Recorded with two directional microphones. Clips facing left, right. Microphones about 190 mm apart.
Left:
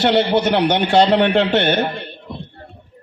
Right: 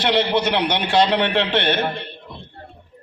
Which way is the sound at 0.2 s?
45° left (ahead or behind).